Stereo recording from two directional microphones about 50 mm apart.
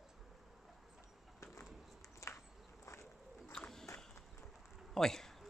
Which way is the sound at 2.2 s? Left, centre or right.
Left.